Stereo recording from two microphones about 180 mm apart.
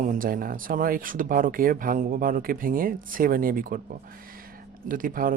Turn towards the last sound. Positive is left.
turn(degrees=-50)  # may be behind; listen again after turning